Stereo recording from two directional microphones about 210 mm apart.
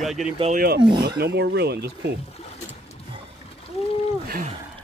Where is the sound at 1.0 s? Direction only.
50° right (ahead or behind).